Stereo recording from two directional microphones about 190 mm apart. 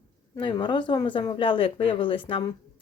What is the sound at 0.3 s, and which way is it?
Speech, 25° left (ahead or behind).